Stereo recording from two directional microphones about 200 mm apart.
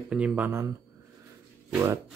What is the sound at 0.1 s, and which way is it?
Speech, 5° right (ahead or behind).